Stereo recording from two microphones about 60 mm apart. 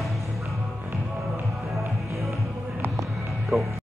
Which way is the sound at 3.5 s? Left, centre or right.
Right.